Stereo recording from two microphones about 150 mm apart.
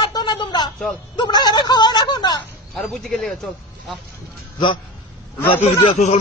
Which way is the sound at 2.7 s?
Centre (ahead or behind).